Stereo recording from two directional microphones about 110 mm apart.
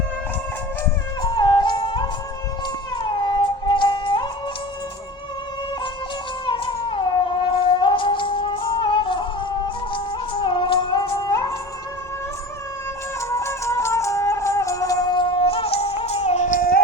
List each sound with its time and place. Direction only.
1.2 s music: 40° left (ahead or behind)
6.4 s music: 45° left (ahead or behind)
13.3 s music: 25° left (ahead or behind); by 16.5 s 85° left